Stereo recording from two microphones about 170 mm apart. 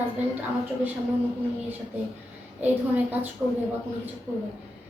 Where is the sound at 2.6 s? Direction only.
10° right (ahead or behind).